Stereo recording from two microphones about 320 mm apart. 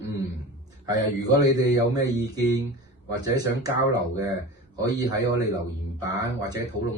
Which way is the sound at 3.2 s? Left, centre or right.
Centre.